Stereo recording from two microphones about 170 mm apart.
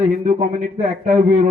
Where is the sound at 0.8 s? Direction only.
40° right (ahead or behind).